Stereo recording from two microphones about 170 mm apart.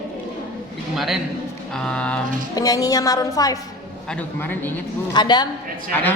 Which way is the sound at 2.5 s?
20° left (ahead or behind).